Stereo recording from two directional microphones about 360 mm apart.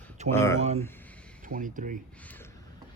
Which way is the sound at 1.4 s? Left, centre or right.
Right.